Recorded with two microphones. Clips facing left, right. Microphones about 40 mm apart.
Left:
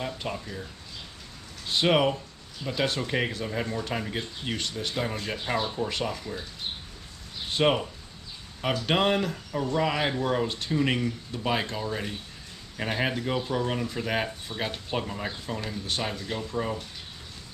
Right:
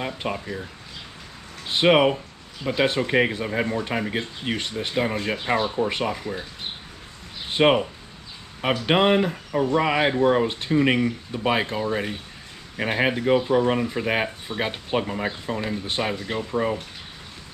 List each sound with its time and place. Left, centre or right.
0.0 s speech: right
1.7 s speech: right
7.5 s speech: right